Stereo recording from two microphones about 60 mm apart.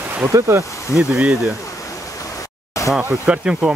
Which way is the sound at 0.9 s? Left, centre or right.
Centre.